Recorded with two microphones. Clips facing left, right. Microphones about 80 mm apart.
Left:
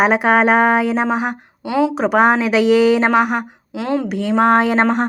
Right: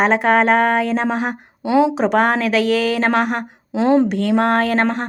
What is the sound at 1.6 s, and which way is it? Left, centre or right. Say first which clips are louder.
Speech: right 2 dB; right.